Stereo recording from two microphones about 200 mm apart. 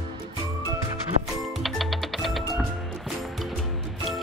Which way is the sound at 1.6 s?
Centre (ahead or behind).